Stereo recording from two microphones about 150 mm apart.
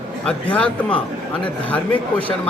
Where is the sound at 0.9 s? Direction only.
35° left (ahead or behind).